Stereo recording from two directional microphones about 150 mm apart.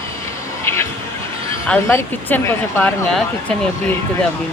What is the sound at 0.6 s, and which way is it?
Speech, 15° left (ahead or behind).